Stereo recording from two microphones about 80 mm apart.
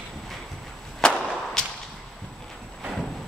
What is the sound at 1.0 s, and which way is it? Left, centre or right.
Whip, centre.